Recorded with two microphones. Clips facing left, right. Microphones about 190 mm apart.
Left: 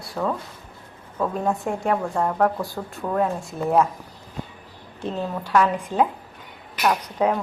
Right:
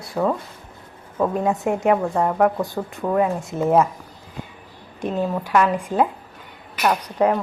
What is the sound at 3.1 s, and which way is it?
Speech, 5° right (ahead or behind).